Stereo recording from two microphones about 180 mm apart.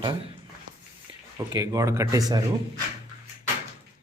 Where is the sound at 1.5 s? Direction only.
20° right (ahead or behind).